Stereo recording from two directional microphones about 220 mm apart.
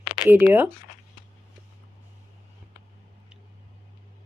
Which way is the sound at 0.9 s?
35° left (ahead or behind).